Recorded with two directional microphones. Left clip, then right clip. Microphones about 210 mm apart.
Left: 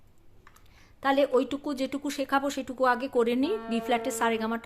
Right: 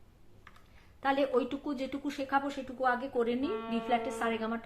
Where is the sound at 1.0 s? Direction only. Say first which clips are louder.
Left 5 dB; 40° left (ahead or behind).